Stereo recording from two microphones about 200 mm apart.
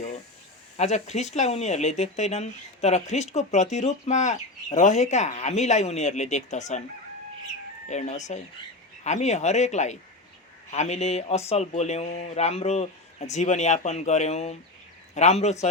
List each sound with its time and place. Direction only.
0.8 s speech: 35° left (ahead or behind)
7.9 s a man's voice: 35° left (ahead or behind)